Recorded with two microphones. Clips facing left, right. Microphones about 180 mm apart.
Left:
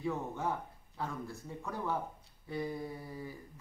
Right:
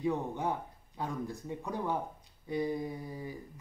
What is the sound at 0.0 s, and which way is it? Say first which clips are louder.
Speech: right 3 dB; 20° right (ahead or behind).